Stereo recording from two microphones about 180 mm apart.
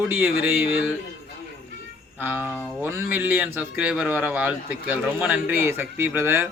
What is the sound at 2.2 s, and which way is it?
A man's voice, 10° right (ahead or behind).